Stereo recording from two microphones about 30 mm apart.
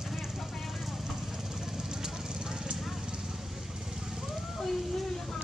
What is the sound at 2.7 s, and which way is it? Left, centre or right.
Clip-clop, centre.